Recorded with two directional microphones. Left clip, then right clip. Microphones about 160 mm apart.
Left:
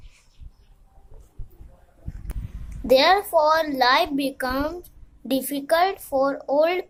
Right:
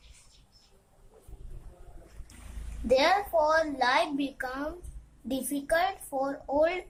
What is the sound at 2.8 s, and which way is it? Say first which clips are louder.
A child's voice: left 7 dB; 55° left (ahead or behind).